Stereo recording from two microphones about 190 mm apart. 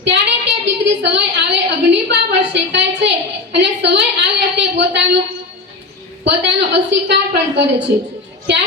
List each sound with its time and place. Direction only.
0.0 s a woman's voice: 70° right (ahead or behind)
6.2 s a woman's voice: 65° right (ahead or behind)